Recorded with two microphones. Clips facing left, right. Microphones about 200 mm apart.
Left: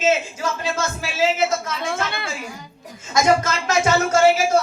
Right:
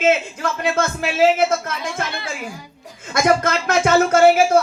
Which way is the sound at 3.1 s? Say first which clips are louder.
Right 1 dB; 55° right (ahead or behind).